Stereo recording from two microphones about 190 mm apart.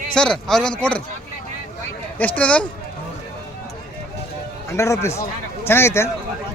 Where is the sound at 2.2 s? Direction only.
5° left (ahead or behind).